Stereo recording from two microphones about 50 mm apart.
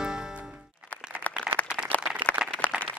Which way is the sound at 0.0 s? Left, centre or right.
Centre.